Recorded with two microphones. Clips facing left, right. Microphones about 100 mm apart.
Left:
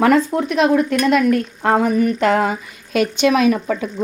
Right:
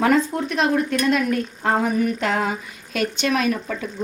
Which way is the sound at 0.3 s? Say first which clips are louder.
Left 5 dB; 20° left (ahead or behind).